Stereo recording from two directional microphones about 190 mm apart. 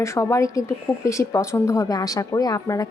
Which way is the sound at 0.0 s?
15° left (ahead or behind).